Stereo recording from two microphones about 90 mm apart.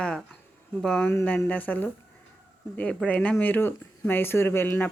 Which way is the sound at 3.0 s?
15° left (ahead or behind).